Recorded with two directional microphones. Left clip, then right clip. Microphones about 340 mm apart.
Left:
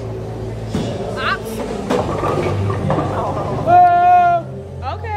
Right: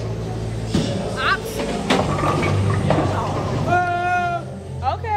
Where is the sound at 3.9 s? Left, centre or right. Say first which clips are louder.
Left 10 dB; left.